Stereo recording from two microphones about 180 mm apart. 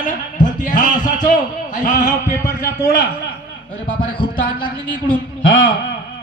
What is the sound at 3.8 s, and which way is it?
Speech, 50° left (ahead or behind).